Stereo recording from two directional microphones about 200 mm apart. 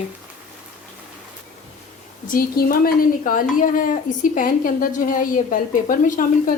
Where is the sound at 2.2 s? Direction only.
45° left (ahead or behind).